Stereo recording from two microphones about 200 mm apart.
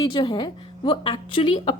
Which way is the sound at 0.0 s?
25° left (ahead or behind).